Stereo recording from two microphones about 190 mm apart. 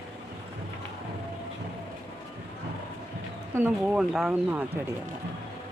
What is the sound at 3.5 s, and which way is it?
Speech, 5° right (ahead or behind).